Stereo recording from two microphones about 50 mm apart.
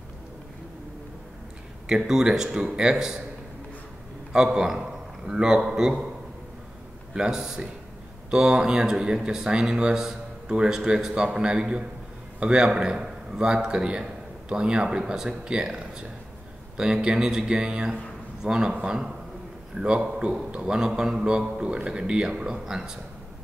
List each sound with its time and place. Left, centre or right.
1.9 s speech: centre
4.3 s a man's voice: centre
7.2 s a man's voice: centre